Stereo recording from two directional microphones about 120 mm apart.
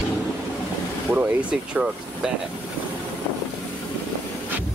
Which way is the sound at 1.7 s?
5° right (ahead or behind).